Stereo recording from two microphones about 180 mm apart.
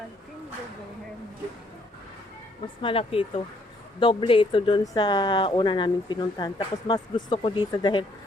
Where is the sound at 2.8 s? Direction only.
30° left (ahead or behind).